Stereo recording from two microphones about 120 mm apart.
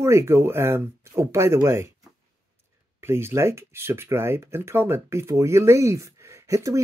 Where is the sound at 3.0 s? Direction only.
20° right (ahead or behind).